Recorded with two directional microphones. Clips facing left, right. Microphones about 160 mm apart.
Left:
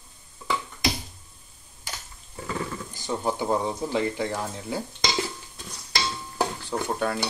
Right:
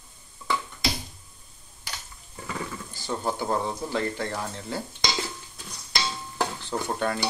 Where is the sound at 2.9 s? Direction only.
15° left (ahead or behind).